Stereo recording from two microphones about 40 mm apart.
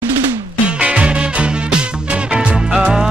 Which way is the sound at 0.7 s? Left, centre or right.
Right.